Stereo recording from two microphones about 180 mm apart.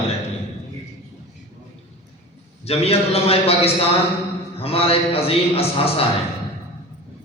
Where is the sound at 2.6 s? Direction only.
35° left (ahead or behind).